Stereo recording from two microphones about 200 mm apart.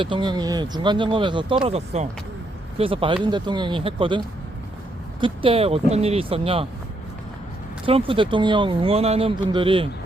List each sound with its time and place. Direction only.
0.0 s speech: 25° right (ahead or behind)
5.2 s speech: 25° right (ahead or behind)
7.9 s speech: 25° right (ahead or behind)